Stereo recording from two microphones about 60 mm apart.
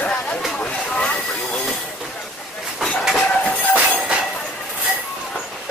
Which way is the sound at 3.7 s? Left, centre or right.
Right.